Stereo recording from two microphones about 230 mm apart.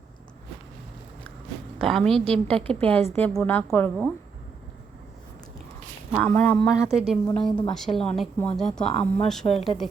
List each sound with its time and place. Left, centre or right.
1.8 s a woman's voice: centre
6.1 s speech: centre
6.9 s a woman's voice: centre
8.8 s speech: left
9.2 s a woman's voice: centre